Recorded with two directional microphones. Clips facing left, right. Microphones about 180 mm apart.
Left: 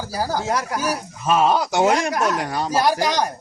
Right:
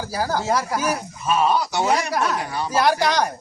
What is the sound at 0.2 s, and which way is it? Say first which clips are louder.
Speech: even; 15° left (ahead or behind).